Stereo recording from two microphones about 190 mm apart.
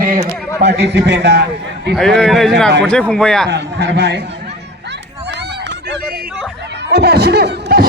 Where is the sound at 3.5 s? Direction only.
60° right (ahead or behind).